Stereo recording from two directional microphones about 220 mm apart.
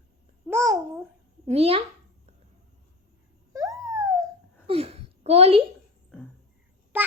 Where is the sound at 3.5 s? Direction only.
15° right (ahead or behind).